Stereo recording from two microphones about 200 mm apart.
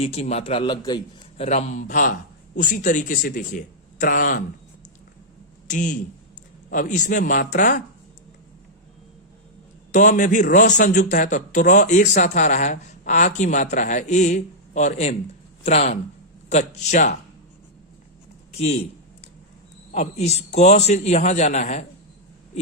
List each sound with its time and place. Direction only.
0.0 s a man's voice: 30° left (ahead or behind)
1.4 s a man's voice: 35° left (ahead or behind)
5.6 s a man's voice: 40° left (ahead or behind)
9.9 s a man's voice: 40° left (ahead or behind)
18.5 s speech: 30° left (ahead or behind)
19.9 s a man's voice: 35° left (ahead or behind)